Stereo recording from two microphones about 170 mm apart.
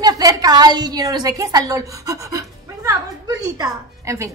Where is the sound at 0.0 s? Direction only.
25° right (ahead or behind).